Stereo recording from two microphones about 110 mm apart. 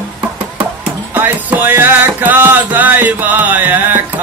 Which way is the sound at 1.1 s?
15° right (ahead or behind).